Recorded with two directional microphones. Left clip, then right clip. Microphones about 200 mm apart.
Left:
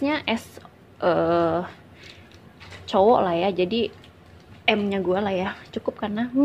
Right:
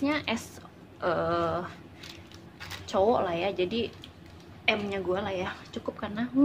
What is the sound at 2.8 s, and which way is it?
A woman's voice, 40° left (ahead or behind).